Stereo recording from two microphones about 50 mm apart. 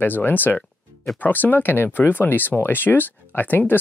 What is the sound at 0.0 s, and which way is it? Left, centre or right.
Speech, left.